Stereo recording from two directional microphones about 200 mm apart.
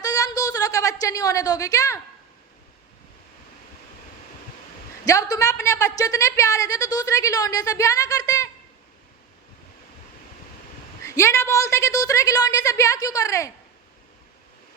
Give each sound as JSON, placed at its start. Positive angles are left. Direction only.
{"t": 0.0, "sound": "a sound", "side_deg": 20}
{"t": 5.0, "sound": "a woman's voice", "side_deg": 15}
{"t": 11.0, "sound": "a woman's voice", "side_deg": 15}